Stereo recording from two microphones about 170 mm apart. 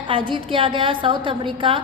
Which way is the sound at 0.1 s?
30° right (ahead or behind).